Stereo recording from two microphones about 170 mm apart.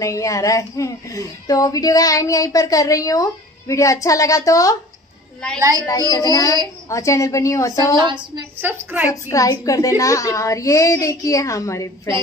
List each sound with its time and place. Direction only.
0.0 s speech: 20° left (ahead or behind)
5.6 s a woman's voice: 20° right (ahead or behind)
5.9 s a woman's voice: 20° left (ahead or behind)
8.5 s a woman's voice: 10° right (ahead or behind)
9.3 s speech: 20° left (ahead or behind)